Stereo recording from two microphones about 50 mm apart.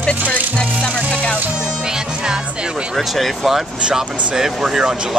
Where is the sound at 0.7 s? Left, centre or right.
Centre.